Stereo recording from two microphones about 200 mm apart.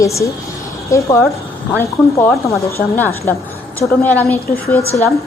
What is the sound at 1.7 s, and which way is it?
A woman's voice, 10° left (ahead or behind).